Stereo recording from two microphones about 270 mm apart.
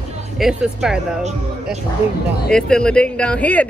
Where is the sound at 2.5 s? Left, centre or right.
Centre.